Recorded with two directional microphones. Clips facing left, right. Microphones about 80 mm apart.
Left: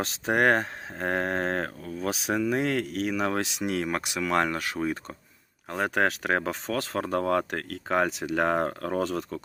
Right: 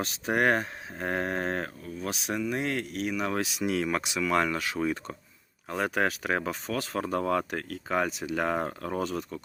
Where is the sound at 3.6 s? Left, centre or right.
Left.